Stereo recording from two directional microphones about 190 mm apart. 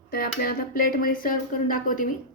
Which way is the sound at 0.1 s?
50° left (ahead or behind).